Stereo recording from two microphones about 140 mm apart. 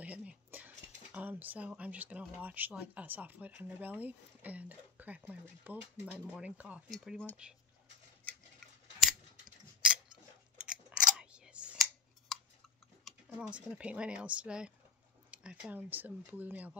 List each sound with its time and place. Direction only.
0.0 s speech: 10° right (ahead or behind)
8.3 s scissors: centre (ahead or behind)
10.6 s scissors: 5° right (ahead or behind)
13.0 s speech: 5° right (ahead or behind)